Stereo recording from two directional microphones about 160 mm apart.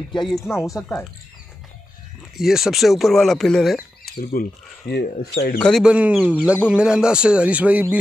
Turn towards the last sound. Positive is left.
turn(degrees=-10)  # may be behind; listen again after turning